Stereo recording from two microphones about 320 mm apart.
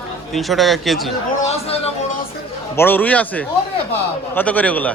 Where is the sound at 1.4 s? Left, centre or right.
Centre.